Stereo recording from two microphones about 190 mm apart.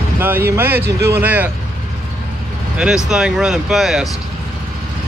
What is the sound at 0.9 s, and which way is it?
Speech, 60° right (ahead or behind).